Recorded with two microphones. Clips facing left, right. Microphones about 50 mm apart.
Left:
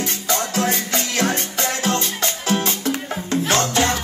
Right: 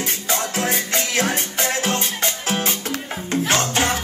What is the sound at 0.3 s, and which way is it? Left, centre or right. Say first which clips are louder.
Music: left 2 dB; right.